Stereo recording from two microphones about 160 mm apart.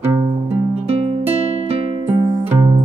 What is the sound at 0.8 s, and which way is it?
Music, 40° right (ahead or behind).